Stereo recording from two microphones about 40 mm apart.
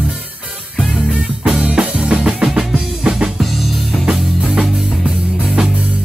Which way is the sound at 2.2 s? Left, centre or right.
Centre.